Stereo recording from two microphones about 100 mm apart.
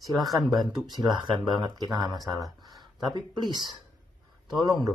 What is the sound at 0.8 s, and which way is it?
Speech, 45° right (ahead or behind).